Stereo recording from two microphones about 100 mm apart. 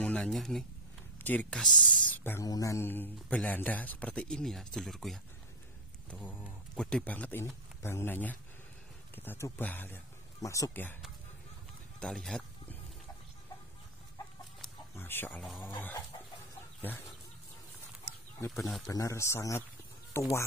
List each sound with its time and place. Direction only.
0.0 s speech: 10° left (ahead or behind)
1.2 s speech: 15° left (ahead or behind)
1.6 s speech: 5° left (ahead or behind)
2.1 s a sound: 20° left (ahead or behind)
2.4 s speech: 35° left (ahead or behind); by 5.2 s centre (ahead or behind)
6.0 s speech: 20° left (ahead or behind)
10.4 s a man's voice: 35° left (ahead or behind)
10.7 s speech: 20° left (ahead or behind)
12.0 s speech: 5° left (ahead or behind)
15.0 s speech: 20° left (ahead or behind)
16.8 s speech: 20° left (ahead or behind)
18.5 s speech: centre (ahead or behind)
18.9 s a man's voice: 35° left (ahead or behind)